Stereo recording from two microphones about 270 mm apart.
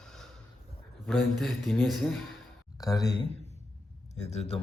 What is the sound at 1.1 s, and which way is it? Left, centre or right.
A man's voice, centre.